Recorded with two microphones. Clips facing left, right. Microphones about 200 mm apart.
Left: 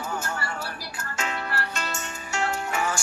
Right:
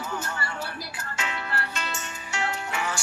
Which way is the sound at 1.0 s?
45° left (ahead or behind).